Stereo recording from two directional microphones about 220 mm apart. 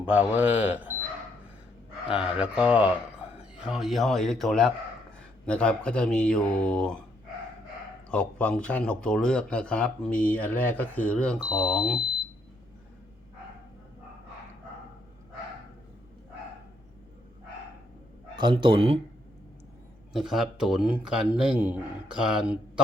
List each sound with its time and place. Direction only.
0.0 s speech: 5° right (ahead or behind)
2.0 s speech: 5° right (ahead or behind)
8.1 s speech: 5° left (ahead or behind)
18.3 s speech: 20° right (ahead or behind)
20.1 s speech: centre (ahead or behind)